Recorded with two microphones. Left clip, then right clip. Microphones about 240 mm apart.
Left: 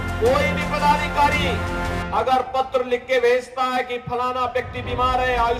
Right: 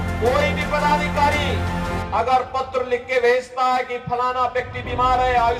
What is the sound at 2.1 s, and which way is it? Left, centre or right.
Speech, left.